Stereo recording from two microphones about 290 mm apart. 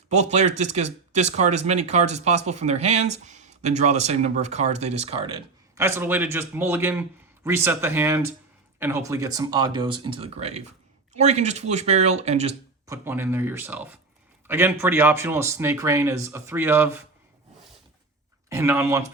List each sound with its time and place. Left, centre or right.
0.1 s speech: right
12.9 s speech: centre
18.4 s speech: centre